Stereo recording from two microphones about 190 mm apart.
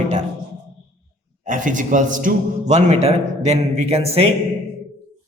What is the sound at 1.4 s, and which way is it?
A man's voice, 40° right (ahead or behind).